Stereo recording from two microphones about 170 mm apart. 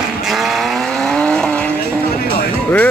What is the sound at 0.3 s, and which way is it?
Vehicle, centre (ahead or behind).